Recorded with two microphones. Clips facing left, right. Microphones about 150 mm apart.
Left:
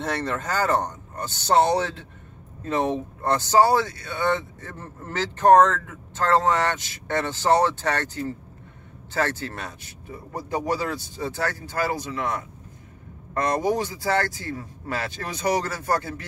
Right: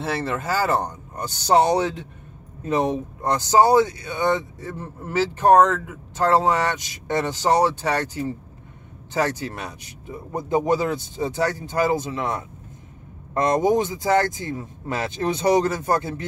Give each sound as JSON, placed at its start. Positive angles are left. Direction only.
{"t": 0.0, "sound": "speech", "side_deg": -5}